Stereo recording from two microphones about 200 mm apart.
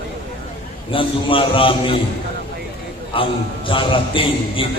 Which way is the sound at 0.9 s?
25° left (ahead or behind).